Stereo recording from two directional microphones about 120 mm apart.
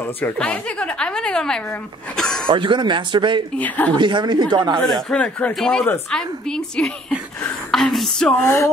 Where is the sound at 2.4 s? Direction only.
45° right (ahead or behind).